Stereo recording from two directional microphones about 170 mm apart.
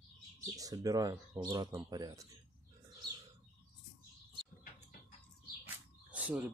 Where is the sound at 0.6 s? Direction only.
20° right (ahead or behind).